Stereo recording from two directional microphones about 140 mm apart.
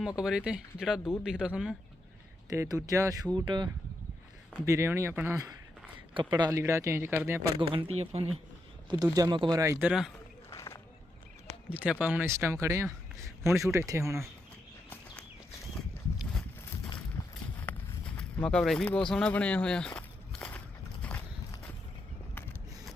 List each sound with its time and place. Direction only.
0.2 s speech: 5° right (ahead or behind)
2.5 s speech: 25° right (ahead or behind)
4.6 s speech: 20° right (ahead or behind)
6.5 s speech: 20° right (ahead or behind)
7.7 s speech: 45° right (ahead or behind)
8.9 s speech: 25° right (ahead or behind)
9.6 s speech: 15° right (ahead or behind)
10.5 s a sound: 20° left (ahead or behind)
11.7 s speech: 10° right (ahead or behind)
17.2 s a sound: 25° left (ahead or behind)
17.7 s a sound: 10° left (ahead or behind)
18.2 s speech: 5° left (ahead or behind)
21.0 s a sound: 10° left (ahead or behind)